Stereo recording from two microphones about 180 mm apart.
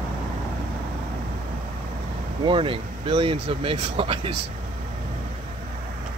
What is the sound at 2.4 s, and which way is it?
Speech, 30° right (ahead or behind).